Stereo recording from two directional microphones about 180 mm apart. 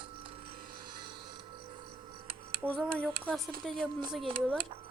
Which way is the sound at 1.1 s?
25° right (ahead or behind).